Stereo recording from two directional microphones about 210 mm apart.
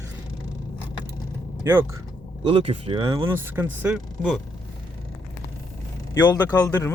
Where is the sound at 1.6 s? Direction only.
10° right (ahead or behind).